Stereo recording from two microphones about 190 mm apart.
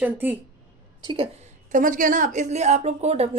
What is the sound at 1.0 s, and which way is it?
Speech, 30° right (ahead or behind).